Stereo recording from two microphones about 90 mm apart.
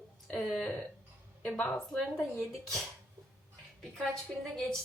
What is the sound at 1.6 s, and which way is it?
Speech, 15° left (ahead or behind).